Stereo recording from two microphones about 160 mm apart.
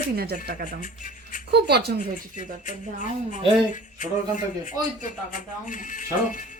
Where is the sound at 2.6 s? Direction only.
50° left (ahead or behind).